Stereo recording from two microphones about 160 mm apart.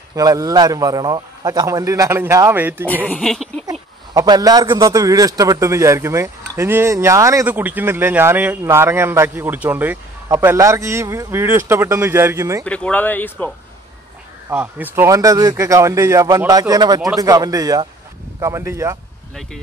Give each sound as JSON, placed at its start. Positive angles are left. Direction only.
{"t": 0.1, "sound": "a man's voice", "side_deg": -20}
{"t": 3.1, "sound": "speech", "side_deg": 0}
{"t": 4.1, "sound": "a man's voice", "side_deg": -25}
{"t": 12.6, "sound": "speech", "side_deg": 10}
{"t": 14.5, "sound": "a man's voice", "side_deg": -10}